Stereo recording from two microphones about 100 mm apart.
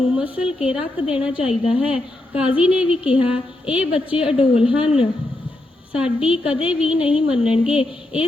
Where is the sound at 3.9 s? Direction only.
65° left (ahead or behind).